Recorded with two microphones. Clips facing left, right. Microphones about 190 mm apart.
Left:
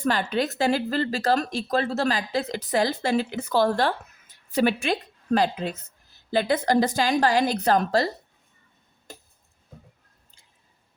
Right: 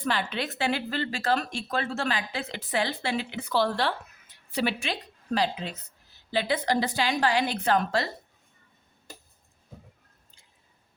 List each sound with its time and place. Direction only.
0.0 s a woman's voice: 45° left (ahead or behind)